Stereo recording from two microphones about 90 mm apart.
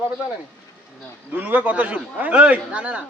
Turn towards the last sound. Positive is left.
turn(degrees=-15)  # may be behind; listen again after turning